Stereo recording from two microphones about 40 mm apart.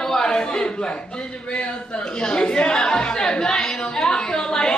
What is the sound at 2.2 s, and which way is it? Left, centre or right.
Speech, centre.